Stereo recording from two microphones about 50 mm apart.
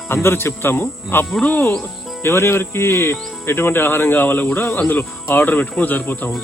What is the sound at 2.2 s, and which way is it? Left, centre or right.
Speech, left.